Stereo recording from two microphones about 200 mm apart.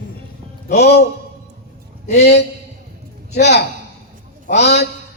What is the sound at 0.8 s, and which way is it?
Speech, 55° left (ahead or behind).